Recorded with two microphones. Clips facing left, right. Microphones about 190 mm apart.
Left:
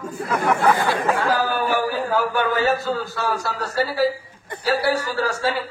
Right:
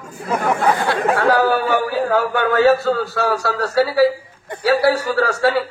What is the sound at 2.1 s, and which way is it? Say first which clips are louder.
A man's voice: right 4 dB; 70° right (ahead or behind).